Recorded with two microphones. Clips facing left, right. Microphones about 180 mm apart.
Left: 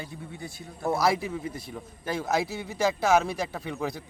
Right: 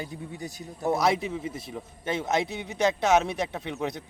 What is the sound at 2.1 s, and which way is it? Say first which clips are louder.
A man's voice: right 1 dB; 20° right (ahead or behind).